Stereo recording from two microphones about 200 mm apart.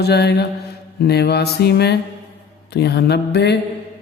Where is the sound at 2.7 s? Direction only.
55° left (ahead or behind).